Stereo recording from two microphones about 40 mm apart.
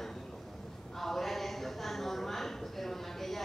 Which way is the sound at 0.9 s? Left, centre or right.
Centre.